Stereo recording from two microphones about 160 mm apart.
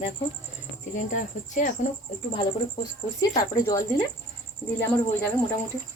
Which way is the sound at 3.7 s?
20° left (ahead or behind).